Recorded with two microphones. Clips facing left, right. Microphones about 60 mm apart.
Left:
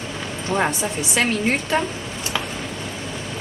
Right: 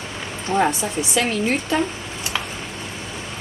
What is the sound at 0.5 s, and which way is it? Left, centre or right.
Speech, right.